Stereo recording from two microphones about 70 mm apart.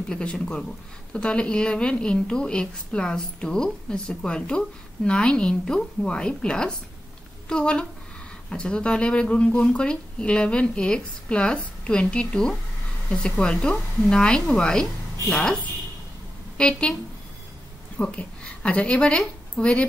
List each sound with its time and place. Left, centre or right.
0.1 s a woman's voice: centre
17.9 s a woman's voice: centre